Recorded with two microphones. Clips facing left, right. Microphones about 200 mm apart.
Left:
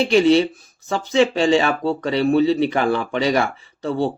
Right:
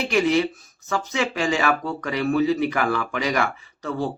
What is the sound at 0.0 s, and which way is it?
Speech, 30° left (ahead or behind).